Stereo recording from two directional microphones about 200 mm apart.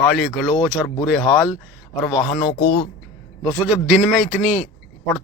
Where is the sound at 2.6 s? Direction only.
50° left (ahead or behind).